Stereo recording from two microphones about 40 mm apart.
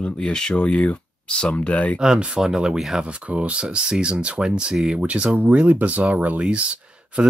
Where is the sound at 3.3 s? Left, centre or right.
Right.